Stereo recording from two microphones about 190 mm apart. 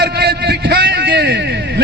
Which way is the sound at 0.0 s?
60° right (ahead or behind).